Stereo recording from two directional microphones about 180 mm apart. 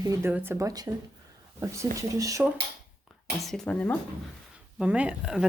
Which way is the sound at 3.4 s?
Centre (ahead or behind).